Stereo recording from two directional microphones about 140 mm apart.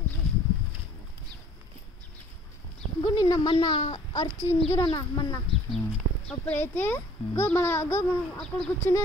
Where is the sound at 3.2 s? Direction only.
30° left (ahead or behind).